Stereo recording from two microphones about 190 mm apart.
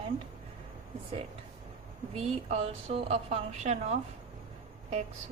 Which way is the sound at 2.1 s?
35° right (ahead or behind).